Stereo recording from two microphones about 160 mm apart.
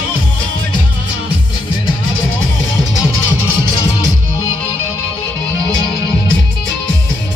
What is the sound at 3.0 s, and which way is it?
Music, 20° left (ahead or behind).